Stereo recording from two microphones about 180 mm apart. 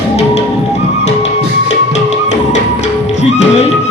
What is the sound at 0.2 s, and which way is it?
Music, 35° left (ahead or behind).